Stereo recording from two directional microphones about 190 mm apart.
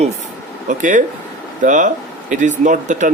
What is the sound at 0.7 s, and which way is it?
Speech, 40° right (ahead or behind).